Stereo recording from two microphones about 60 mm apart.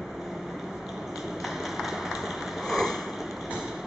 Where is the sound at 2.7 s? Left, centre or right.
Centre.